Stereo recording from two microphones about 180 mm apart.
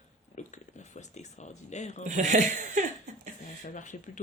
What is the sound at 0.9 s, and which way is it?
Speech, 40° left (ahead or behind).